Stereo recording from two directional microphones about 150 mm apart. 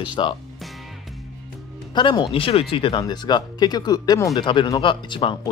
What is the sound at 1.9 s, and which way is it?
Speech, 30° left (ahead or behind).